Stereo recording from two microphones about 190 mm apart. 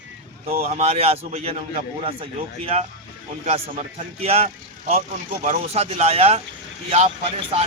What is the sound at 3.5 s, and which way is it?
A man's voice, 35° right (ahead or behind).